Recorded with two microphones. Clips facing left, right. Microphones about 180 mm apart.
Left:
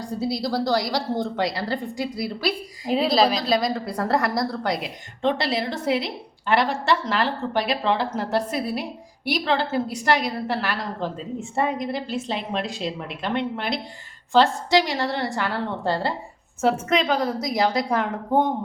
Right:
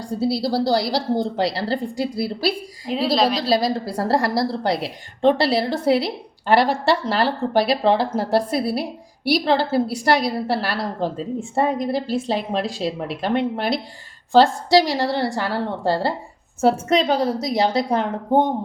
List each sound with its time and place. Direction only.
0.2 s a woman's voice: 30° right (ahead or behind)
2.9 s a woman's voice: centre (ahead or behind)
3.4 s a woman's voice: 30° right (ahead or behind)